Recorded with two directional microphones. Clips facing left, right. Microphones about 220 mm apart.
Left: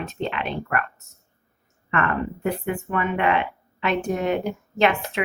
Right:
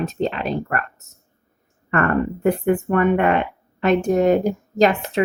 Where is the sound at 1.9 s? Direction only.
45° right (ahead or behind).